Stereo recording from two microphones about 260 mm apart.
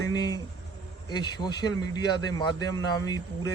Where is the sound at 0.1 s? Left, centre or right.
Centre.